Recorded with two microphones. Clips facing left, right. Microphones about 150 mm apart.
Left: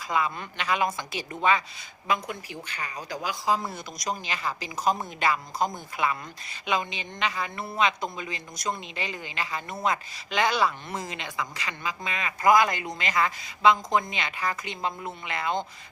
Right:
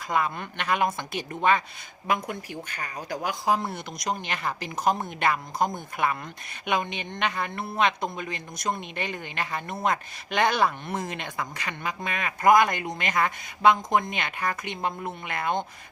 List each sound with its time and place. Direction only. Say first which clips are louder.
0.0 s speech: right 1 dB; 55° right (ahead or behind)